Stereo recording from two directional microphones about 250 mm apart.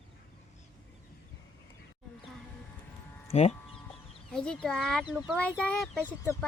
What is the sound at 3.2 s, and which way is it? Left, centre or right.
Speech, left.